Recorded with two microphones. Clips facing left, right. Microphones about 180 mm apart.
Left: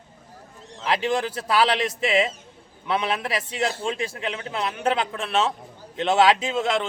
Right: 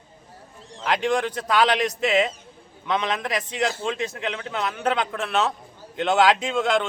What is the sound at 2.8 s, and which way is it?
Speech, 10° left (ahead or behind).